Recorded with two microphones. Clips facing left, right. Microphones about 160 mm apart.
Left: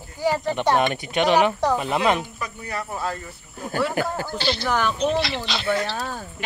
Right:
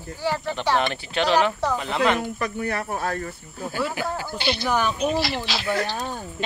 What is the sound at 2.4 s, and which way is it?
Speech, 60° right (ahead or behind).